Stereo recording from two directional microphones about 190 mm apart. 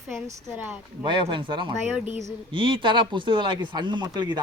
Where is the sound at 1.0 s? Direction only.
25° right (ahead or behind).